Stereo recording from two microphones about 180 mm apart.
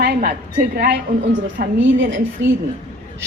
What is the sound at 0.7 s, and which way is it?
Speech, 65° right (ahead or behind).